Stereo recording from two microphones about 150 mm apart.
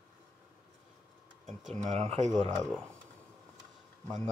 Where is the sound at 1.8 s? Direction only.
45° right (ahead or behind).